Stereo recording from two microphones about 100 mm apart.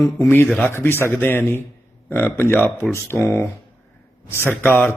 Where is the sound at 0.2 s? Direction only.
20° left (ahead or behind).